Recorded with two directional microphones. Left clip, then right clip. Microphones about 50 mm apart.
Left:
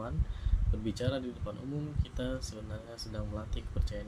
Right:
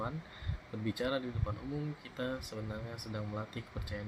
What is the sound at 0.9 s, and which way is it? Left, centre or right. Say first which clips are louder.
Speech: right 1 dB; right.